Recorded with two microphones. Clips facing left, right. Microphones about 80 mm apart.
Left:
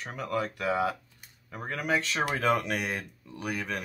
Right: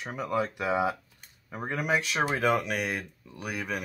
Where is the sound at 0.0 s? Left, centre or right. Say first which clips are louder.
Right 2 dB; centre.